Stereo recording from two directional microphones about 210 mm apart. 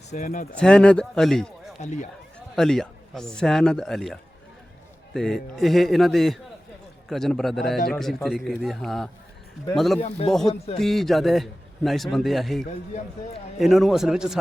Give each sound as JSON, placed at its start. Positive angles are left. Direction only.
{"t": 0.1, "sound": "speech", "side_deg": 35}
{"t": 0.5, "sound": "a man's voice", "side_deg": 5}
{"t": 1.8, "sound": "speech", "side_deg": 35}
{"t": 2.6, "sound": "a man's voice", "side_deg": 0}
{"t": 10.4, "sound": "a man's voice", "side_deg": 30}
{"t": 10.8, "sound": "a man's voice", "side_deg": 0}